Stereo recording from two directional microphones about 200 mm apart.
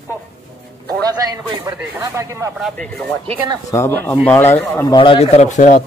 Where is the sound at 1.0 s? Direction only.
20° right (ahead or behind).